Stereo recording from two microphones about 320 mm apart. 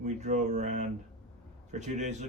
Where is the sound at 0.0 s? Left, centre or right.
Right.